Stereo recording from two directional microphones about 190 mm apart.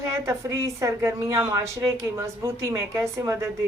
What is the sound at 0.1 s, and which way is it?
A woman's voice, 15° right (ahead or behind).